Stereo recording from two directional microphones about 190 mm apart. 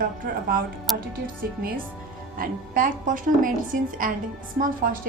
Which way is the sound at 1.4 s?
55° right (ahead or behind).